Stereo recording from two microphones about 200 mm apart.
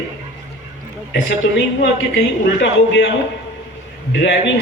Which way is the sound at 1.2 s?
60° left (ahead or behind).